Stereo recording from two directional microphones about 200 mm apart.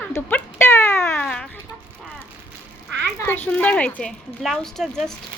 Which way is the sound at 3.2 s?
10° left (ahead or behind).